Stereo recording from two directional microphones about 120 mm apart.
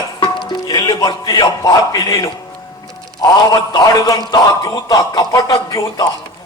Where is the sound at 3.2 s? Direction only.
35° left (ahead or behind).